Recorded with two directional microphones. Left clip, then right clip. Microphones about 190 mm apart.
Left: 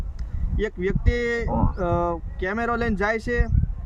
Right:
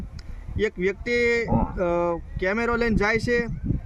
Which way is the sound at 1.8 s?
5° left (ahead or behind).